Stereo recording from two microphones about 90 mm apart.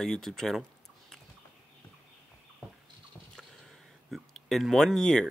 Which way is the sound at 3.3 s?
5° left (ahead or behind).